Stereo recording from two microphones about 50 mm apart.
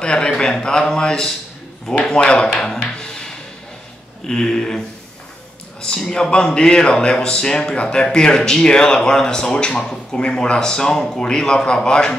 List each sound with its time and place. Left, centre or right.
0.0 s a man's voice: centre
3.0 s a sound: centre
4.3 s a man's voice: centre